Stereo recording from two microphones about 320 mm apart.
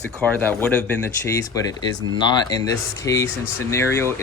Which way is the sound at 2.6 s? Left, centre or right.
Centre.